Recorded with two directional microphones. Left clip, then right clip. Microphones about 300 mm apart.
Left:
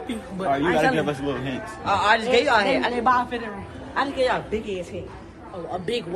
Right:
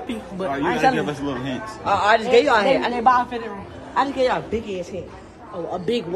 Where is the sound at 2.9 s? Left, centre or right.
Centre.